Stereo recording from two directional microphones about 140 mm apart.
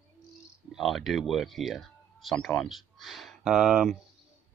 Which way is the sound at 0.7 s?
Centre (ahead or behind).